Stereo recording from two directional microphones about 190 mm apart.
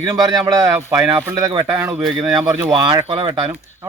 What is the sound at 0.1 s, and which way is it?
A man's voice, 20° right (ahead or behind).